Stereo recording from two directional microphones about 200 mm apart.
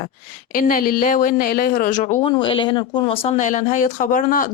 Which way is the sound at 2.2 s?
25° left (ahead or behind).